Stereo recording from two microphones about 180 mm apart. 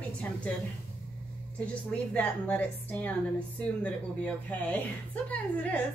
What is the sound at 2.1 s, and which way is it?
A woman's voice, 10° left (ahead or behind).